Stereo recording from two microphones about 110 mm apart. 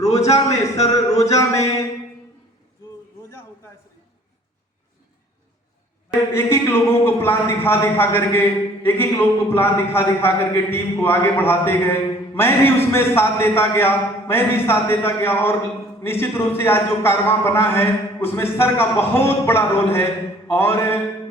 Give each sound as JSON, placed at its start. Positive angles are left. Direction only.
{"t": 0.0, "sound": "a man's voice", "side_deg": 80}
{"t": 0.9, "sound": "a sound", "side_deg": 30}
{"t": 1.2, "sound": "a man's voice", "side_deg": 30}
{"t": 6.3, "sound": "a man's voice", "side_deg": 20}